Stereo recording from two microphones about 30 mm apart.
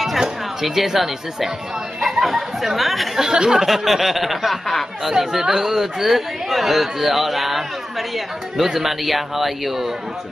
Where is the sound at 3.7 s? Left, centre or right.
Centre.